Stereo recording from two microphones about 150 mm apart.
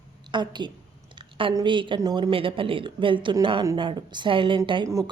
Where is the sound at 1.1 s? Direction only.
35° right (ahead or behind).